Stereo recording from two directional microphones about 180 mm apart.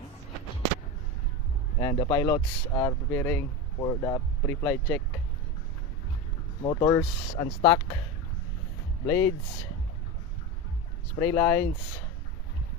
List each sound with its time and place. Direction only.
1.8 s speech: 30° left (ahead or behind); by 5.0 s 10° left (ahead or behind)
6.6 s speech: 25° left (ahead or behind)
9.0 s speech: 15° left (ahead or behind)
11.2 s speech: 15° left (ahead or behind)